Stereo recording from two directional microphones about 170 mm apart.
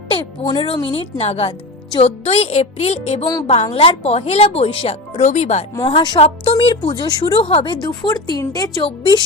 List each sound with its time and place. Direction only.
0.1 s speech: 30° left (ahead or behind)
5.9 s a woman's voice: 30° left (ahead or behind)